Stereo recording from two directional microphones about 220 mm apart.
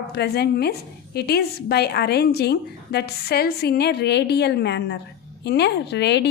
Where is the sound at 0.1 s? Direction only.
50° left (ahead or behind).